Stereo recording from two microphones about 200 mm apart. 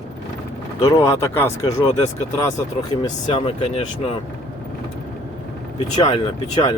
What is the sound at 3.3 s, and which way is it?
Speech, 30° left (ahead or behind).